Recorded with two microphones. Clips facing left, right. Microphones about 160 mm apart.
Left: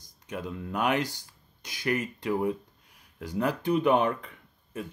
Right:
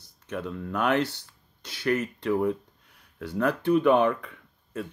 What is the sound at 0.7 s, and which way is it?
Speech, 15° left (ahead or behind).